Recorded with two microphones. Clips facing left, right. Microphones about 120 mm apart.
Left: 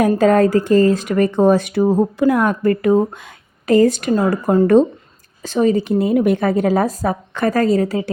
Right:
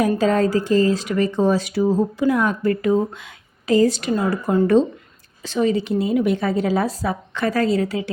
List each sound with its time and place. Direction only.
0.0 s speech: 55° left (ahead or behind)